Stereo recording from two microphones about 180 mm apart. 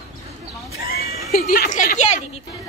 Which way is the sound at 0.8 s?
60° left (ahead or behind).